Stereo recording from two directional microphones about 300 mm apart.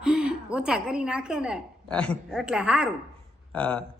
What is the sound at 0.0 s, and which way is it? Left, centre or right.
A woman's voice, centre.